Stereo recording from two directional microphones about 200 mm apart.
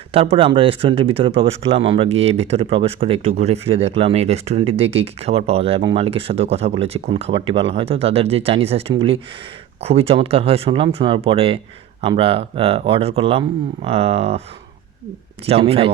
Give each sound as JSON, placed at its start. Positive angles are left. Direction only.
{"t": 0.1, "sound": "speech", "side_deg": -30}
{"t": 15.4, "sound": "speech", "side_deg": -30}